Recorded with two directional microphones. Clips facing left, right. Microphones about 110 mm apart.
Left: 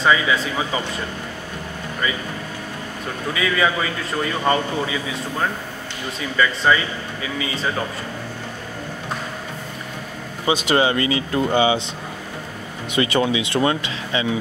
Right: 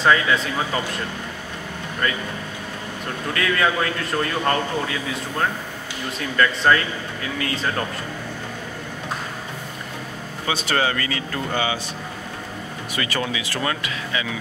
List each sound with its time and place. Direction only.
0.0 s a man's voice: centre (ahead or behind)
2.0 s a man's voice: 5° left (ahead or behind)
3.3 s a man's voice: 5° left (ahead or behind)
10.4 s speech: 15° left (ahead or behind)
12.9 s speech: 25° left (ahead or behind)